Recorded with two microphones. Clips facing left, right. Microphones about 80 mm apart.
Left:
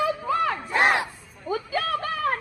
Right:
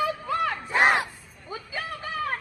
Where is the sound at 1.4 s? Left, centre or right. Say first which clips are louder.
Left 8 dB; left.